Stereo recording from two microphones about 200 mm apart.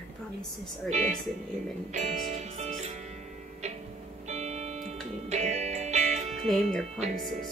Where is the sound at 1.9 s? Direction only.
35° right (ahead or behind).